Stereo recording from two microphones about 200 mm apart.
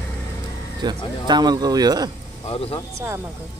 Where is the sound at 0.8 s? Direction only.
20° right (ahead or behind).